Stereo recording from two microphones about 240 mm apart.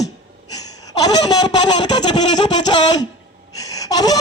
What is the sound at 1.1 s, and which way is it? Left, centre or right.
Speech, centre.